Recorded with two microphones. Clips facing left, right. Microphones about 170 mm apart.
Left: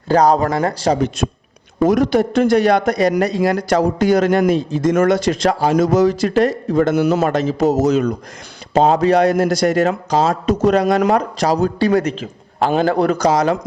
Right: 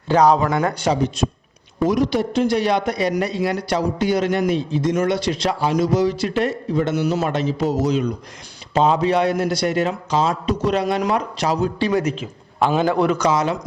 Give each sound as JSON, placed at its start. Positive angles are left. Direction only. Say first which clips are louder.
{"t": 0.1, "sound": "a man's voice", "louder": "left 2 dB", "side_deg": 40}
{"t": 1.8, "sound": "a man's voice", "louder": "left 4 dB", "side_deg": 50}